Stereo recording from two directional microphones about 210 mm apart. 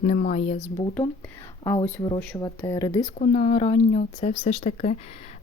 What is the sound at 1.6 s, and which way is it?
Speech, 20° left (ahead or behind).